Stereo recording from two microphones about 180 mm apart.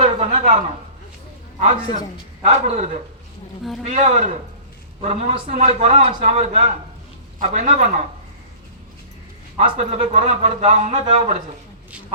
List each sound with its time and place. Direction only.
0.0 s a sound: 35° right (ahead or behind)
1.5 s a man's voice: 40° right (ahead or behind)
7.3 s a man's voice: 45° right (ahead or behind)
9.6 s a man's voice: 35° right (ahead or behind)